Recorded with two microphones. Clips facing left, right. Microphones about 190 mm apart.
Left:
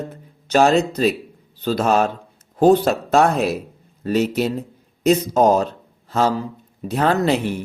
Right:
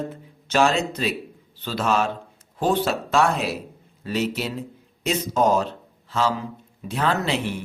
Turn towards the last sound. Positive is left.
turn(degrees=40)  # may be behind; listen again after turning